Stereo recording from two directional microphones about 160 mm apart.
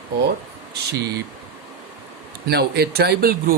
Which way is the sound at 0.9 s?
90° right.